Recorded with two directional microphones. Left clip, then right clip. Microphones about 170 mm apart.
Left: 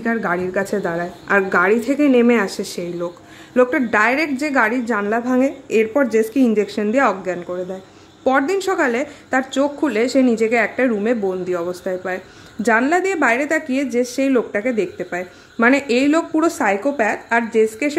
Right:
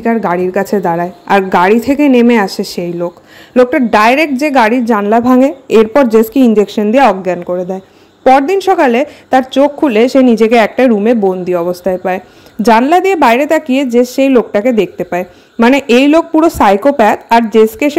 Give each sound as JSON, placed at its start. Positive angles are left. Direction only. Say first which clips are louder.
{"t": 0.0, "sound": "a woman's voice", "louder": "right 8 dB", "side_deg": -30}